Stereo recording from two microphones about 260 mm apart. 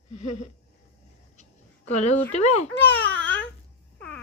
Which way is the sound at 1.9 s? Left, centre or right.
Left.